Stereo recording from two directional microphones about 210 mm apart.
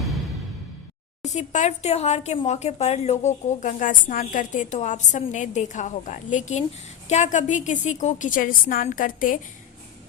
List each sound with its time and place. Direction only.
1.2 s speech: 35° left (ahead or behind)